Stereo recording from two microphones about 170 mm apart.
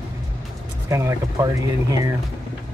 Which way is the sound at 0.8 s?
20° right (ahead or behind).